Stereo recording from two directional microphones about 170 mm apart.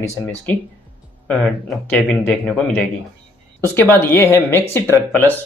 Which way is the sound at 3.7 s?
15° left (ahead or behind).